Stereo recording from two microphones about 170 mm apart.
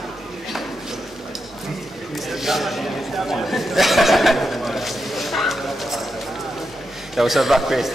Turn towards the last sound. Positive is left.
turn(degrees=0)  # may be behind; listen again after turning